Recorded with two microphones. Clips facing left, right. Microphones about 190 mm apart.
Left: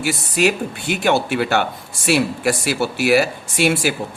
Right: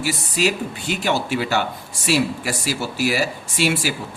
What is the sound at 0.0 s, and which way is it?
Speech, 55° left (ahead or behind).